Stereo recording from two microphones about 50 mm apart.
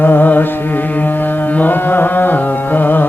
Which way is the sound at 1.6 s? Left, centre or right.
Left.